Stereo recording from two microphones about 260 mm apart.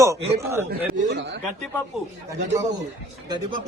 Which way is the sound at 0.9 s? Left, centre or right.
Right.